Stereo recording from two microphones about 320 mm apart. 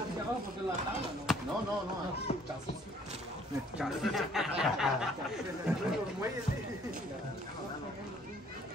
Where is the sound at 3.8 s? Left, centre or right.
Centre.